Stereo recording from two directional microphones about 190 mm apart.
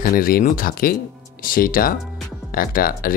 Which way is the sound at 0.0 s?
50° left (ahead or behind).